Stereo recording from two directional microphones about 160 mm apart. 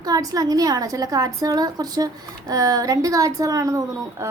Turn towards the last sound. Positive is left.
turn(degrees=-15)  # may be behind; listen again after turning